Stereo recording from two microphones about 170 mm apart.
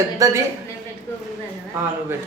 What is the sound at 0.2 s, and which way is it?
Speech, 20° right (ahead or behind).